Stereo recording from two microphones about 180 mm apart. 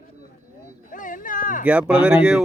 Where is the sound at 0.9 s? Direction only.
50° left (ahead or behind).